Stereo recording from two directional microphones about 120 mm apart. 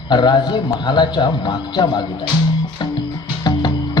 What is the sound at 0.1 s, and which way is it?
A man's voice, 40° left (ahead or behind).